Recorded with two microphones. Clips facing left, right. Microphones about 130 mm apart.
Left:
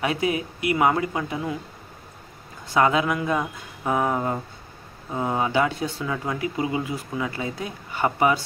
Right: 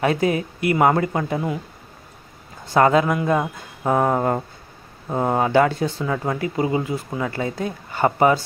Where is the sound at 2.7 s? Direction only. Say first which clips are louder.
Right 4 dB; 45° right (ahead or behind).